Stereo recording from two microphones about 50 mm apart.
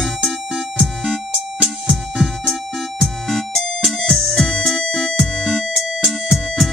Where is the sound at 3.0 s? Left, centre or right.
Centre.